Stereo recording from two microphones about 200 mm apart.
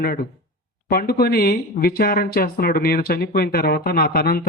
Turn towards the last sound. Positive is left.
turn(degrees=50)  # may be behind; listen again after turning